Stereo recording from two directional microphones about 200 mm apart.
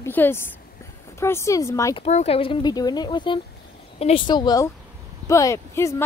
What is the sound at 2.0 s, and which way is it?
Speech, 30° left (ahead or behind).